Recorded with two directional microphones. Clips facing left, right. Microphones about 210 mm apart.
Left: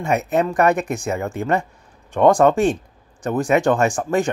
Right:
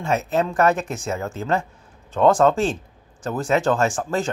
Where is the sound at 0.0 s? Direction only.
15° left (ahead or behind).